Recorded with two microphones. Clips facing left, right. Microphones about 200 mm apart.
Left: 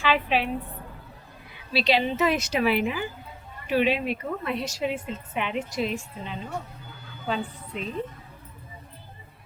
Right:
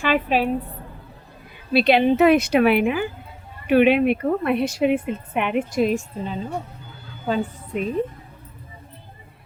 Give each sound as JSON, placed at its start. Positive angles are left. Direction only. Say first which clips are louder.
{"t": 0.0, "sound": "a woman's voice", "louder": "right 4 dB", "side_deg": -45}
{"t": 1.7, "sound": "a woman's voice", "louder": "right 7 dB", "side_deg": -55}